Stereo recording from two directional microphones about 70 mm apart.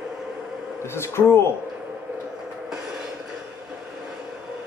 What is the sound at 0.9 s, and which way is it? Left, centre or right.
Speech, left.